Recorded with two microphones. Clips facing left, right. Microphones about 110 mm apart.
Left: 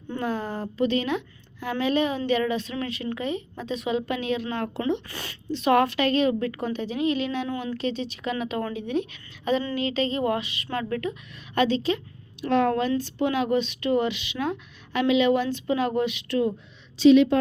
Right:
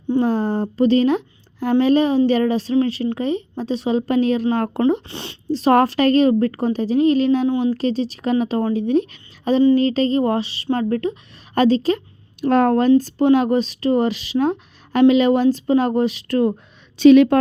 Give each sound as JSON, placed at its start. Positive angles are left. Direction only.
{"t": 0.2, "sound": "a woman's voice", "side_deg": -35}
{"t": 5.0, "sound": "speech", "side_deg": -25}
{"t": 7.4, "sound": "a woman's voice", "side_deg": -25}
{"t": 7.7, "sound": "speech", "side_deg": -40}
{"t": 17.0, "sound": "a woman's voice", "side_deg": -60}